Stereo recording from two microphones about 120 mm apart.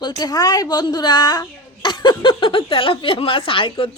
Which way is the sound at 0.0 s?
35° left (ahead or behind).